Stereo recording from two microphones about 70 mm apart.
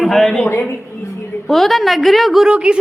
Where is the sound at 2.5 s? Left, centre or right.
Centre.